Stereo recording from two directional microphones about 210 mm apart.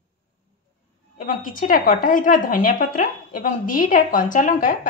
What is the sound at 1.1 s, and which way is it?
A woman's voice, 40° left (ahead or behind).